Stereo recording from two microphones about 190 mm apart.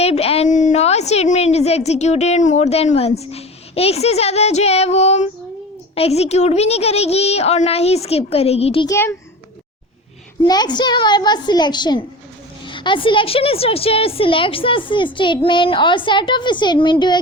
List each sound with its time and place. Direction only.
0.0 s a woman's voice: 30° left (ahead or behind)
8.9 s a child's voice: 15° left (ahead or behind)
10.4 s a woman's voice: 20° left (ahead or behind)